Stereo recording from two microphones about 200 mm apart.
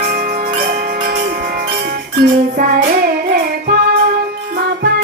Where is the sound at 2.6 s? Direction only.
50° right (ahead or behind).